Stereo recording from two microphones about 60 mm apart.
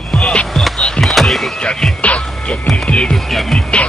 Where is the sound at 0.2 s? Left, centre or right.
Centre.